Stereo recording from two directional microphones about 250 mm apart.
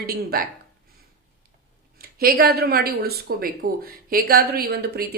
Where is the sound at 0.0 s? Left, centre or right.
Right.